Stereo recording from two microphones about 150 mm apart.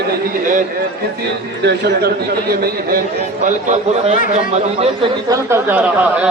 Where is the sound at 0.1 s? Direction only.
60° right (ahead or behind).